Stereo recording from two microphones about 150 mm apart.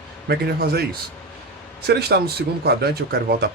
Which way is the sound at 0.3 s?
90° right.